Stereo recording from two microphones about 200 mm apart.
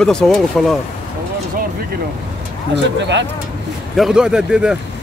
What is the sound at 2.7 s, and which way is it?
Speech, 60° right (ahead or behind).